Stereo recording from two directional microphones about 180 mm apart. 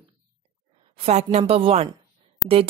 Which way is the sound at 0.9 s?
35° right (ahead or behind).